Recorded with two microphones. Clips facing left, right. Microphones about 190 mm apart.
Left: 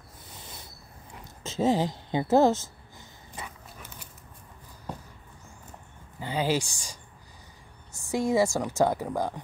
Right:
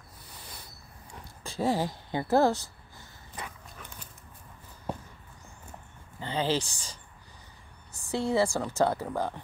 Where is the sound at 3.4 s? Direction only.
5° left (ahead or behind).